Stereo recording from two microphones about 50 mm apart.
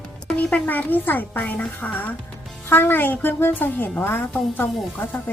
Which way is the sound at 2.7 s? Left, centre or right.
Left.